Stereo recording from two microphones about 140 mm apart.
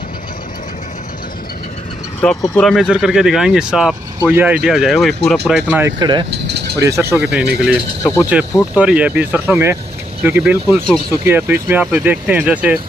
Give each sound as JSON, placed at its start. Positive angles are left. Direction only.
{"t": 2.6, "sound": "speech", "side_deg": 0}
{"t": 4.2, "sound": "speech", "side_deg": -15}
{"t": 4.6, "sound": "speech", "side_deg": 0}
{"t": 5.9, "sound": "speech", "side_deg": -30}
{"t": 6.8, "sound": "speech", "side_deg": -20}
{"t": 7.2, "sound": "speech", "side_deg": -5}
{"t": 8.0, "sound": "pulleys", "side_deg": 20}
{"t": 8.7, "sound": "speech", "side_deg": -10}